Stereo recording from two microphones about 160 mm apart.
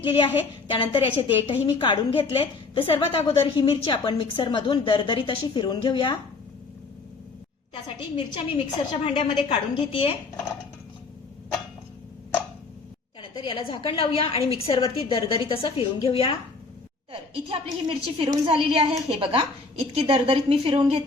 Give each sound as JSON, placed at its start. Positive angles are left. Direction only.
{"t": 0.0, "sound": "a woman's voice", "side_deg": 30}
{"t": 8.1, "sound": "a woman's voice", "side_deg": 30}
{"t": 13.2, "sound": "a woman's voice", "side_deg": 30}
{"t": 17.1, "sound": "a woman's voice", "side_deg": -35}